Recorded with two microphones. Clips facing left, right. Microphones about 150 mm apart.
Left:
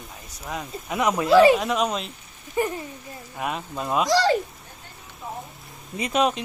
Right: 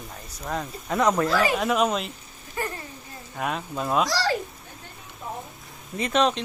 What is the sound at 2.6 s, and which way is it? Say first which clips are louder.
Speech: left 6 dB; 15° left (ahead or behind).